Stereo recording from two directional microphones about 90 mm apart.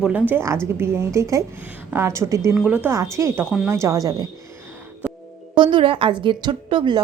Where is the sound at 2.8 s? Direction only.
35° right (ahead or behind).